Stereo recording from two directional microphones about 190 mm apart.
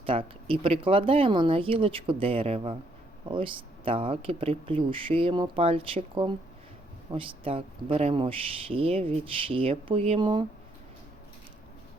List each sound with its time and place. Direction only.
0.0 s speech: 30° right (ahead or behind)